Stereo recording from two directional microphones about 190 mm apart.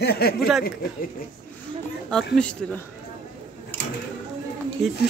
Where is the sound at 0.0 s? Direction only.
55° left (ahead or behind).